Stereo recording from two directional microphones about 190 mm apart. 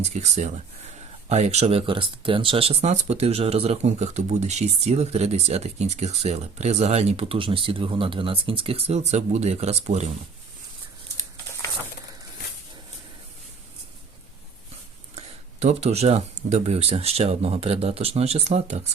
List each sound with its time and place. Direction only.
0.0 s speech: 35° right (ahead or behind)
15.6 s speech: 35° right (ahead or behind)